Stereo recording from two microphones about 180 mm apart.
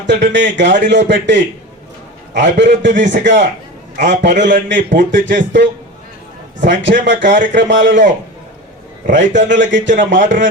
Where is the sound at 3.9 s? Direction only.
45° right (ahead or behind).